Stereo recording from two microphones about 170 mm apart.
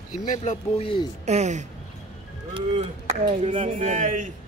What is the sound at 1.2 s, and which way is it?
A man's voice, 45° right (ahead or behind).